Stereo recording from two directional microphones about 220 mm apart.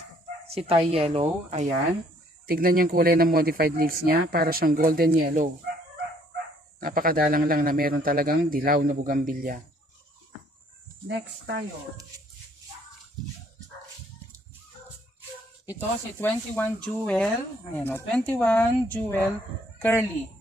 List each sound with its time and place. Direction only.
0.5 s speech: 25° right (ahead or behind)
2.4 s speech: 40° right (ahead or behind)
6.8 s speech: 40° right (ahead or behind)
11.1 s speech: 50° right (ahead or behind)
15.7 s speech: 10° left (ahead or behind)